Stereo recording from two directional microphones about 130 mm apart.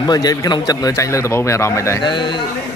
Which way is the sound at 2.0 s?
35° left (ahead or behind).